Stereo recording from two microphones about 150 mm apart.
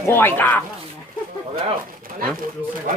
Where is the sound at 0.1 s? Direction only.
15° left (ahead or behind).